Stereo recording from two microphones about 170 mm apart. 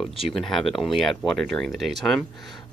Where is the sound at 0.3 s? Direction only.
Centre (ahead or behind).